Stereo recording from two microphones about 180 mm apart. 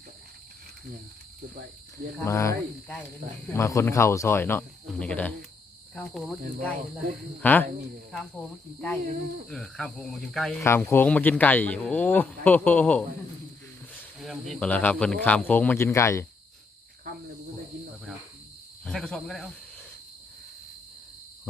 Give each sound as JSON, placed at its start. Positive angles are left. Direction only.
{"t": 2.2, "sound": "speech", "side_deg": 15}
{"t": 5.9, "sound": "cricket", "side_deg": 0}
{"t": 7.4, "sound": "speech", "side_deg": 10}
{"t": 8.1, "sound": "cricket", "side_deg": 0}
{"t": 10.6, "sound": "speech", "side_deg": 15}
{"t": 14.2, "sound": "speech", "side_deg": 0}
{"t": 18.9, "sound": "cricket", "side_deg": 5}